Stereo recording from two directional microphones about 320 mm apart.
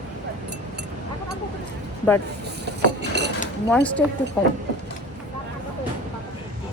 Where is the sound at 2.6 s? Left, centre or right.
Right.